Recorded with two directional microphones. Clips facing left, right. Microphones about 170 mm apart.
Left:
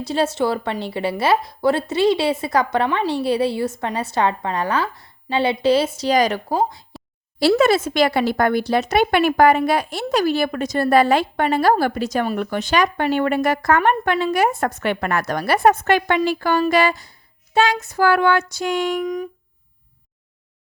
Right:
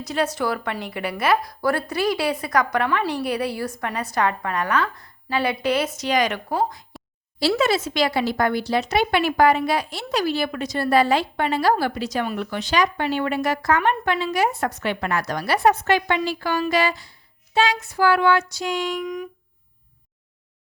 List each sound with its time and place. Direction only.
0.0 s a woman's voice: 30° left (ahead or behind)
7.3 s speech: 55° left (ahead or behind)
19.0 s speech: 35° left (ahead or behind)